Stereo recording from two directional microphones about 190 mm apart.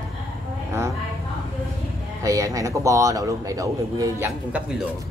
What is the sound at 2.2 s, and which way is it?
A man's voice, 15° right (ahead or behind).